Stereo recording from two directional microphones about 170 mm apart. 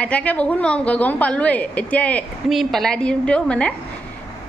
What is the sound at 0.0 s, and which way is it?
A woman's voice, 10° left (ahead or behind).